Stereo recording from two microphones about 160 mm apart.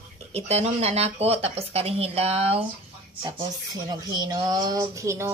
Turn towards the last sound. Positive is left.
turn(degrees=-20)  # may be behind; listen again after turning